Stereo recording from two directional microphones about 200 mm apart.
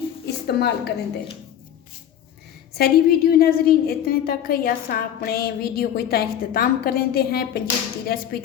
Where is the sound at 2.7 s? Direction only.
50° left (ahead or behind).